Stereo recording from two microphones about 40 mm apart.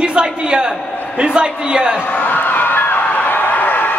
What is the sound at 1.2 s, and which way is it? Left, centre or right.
Speech, right.